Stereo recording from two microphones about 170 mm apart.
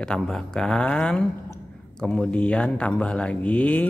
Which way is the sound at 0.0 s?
5° left (ahead or behind).